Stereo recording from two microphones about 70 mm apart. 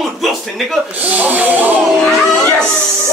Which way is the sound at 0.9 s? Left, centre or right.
Right.